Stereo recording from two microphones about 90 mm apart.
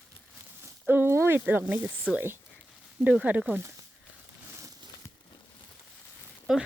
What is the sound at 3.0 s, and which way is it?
Speech, 15° right (ahead or behind).